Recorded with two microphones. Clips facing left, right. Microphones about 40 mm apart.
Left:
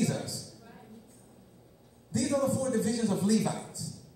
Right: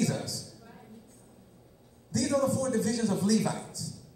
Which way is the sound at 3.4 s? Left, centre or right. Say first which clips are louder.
Right 1 dB; centre.